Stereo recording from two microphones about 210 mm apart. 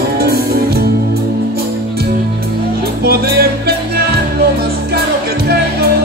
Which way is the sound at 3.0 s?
45° right (ahead or behind).